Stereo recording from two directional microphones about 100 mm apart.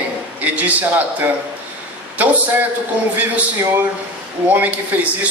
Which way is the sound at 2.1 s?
15° right (ahead or behind).